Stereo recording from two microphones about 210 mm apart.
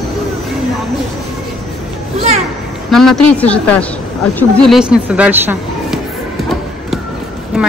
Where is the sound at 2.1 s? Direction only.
30° right (ahead or behind).